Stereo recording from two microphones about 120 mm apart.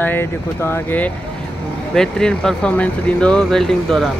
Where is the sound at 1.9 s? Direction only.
5° left (ahead or behind).